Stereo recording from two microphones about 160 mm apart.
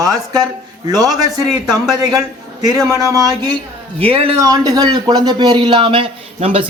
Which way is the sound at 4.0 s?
35° right (ahead or behind).